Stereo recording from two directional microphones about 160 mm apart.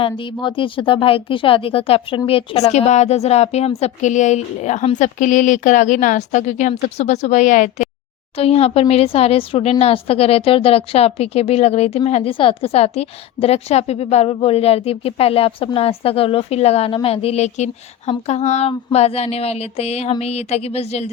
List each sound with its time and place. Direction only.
0.0 s a woman's voice: 30° left (ahead or behind); by 7.9 s 50° left (ahead or behind)
8.4 s speech: 40° left (ahead or behind)